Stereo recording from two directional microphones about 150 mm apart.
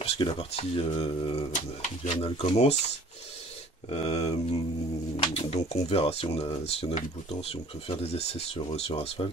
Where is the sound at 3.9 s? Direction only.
45° left (ahead or behind).